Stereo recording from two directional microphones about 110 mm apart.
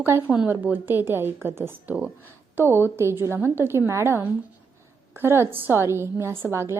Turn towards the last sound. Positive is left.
turn(degrees=-25)  # may be behind; listen again after turning